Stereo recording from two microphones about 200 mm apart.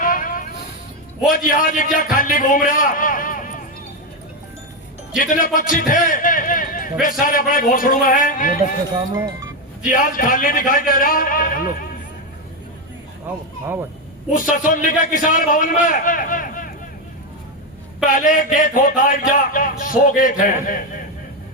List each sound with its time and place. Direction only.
0.0 s vehicle: 45° left (ahead or behind)
1.3 s speech: 45° left (ahead or behind)
5.2 s speech: 40° left (ahead or behind)
9.1 s speech: 25° right (ahead or behind)
9.8 s speech: 45° left (ahead or behind)
14.5 s speech: 40° left (ahead or behind)
18.1 s speech: 40° left (ahead or behind)